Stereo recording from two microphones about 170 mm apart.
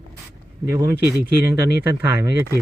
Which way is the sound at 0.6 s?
15° right (ahead or behind).